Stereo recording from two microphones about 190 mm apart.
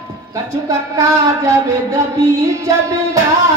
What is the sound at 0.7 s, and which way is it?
A man's voice, 15° right (ahead or behind).